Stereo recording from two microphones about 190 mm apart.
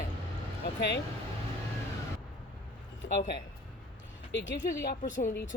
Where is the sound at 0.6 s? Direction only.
60° left (ahead or behind).